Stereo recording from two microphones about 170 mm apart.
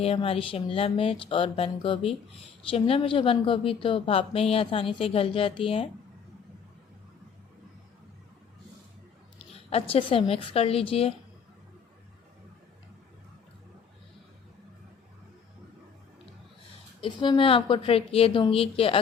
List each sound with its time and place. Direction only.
0.0 s speech: 35° left (ahead or behind)
9.5 s speech: 35° left (ahead or behind)
17.0 s speech: 30° left (ahead or behind)